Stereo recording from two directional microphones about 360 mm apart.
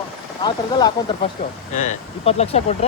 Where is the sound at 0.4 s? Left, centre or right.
Centre.